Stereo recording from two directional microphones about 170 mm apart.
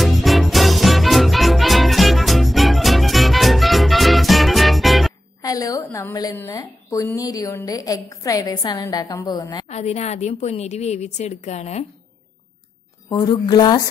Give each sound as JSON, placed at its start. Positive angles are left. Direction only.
{"t": 0.0, "sound": "music", "side_deg": 0}
{"t": 5.4, "sound": "a sound", "side_deg": 20}
{"t": 6.3, "sound": "a woman's voice", "side_deg": 15}
{"t": 9.7, "sound": "a woman's voice", "side_deg": 40}
{"t": 13.1, "sound": "a woman's voice", "side_deg": 25}